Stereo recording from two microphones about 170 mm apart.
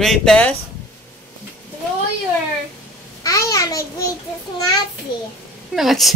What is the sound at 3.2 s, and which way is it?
Babbling, 20° left (ahead or behind).